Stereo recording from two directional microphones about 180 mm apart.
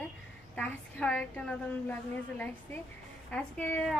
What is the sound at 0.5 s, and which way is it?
A woman's voice, 5° left (ahead or behind).